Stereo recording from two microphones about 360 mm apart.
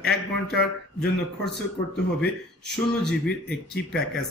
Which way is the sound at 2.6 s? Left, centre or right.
Centre.